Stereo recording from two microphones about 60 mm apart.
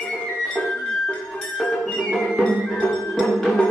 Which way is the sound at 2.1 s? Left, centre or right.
Centre.